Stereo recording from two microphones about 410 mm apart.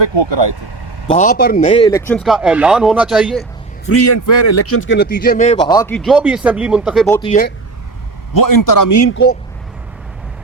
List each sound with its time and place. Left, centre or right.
0.0 s speech: right
1.0 s a man's voice: centre
3.8 s a man's voice: left; by 7.2 s centre
7.2 s a man's voice: centre
8.3 s a man's voice: left